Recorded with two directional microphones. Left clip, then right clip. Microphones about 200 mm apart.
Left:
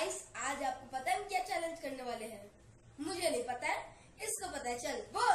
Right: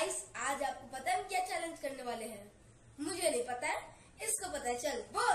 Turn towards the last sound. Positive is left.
turn(degrees=-10)  # may be behind; listen again after turning